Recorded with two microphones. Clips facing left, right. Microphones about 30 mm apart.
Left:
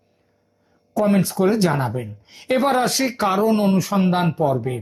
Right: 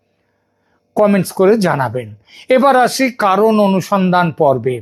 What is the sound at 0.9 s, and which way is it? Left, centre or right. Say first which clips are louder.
Speech: right 6 dB; right.